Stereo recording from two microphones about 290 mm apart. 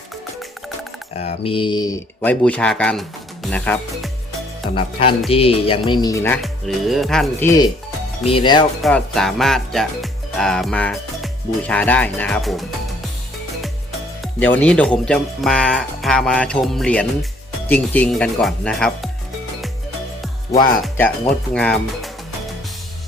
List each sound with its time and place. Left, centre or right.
1.1 s speech: left; by 4.1 s centre
4.7 s speech: centre
8.8 s speech: centre
14.2 s speech: centre
20.8 s speech: centre